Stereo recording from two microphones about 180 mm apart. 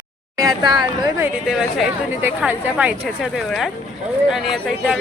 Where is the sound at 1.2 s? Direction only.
5° right (ahead or behind).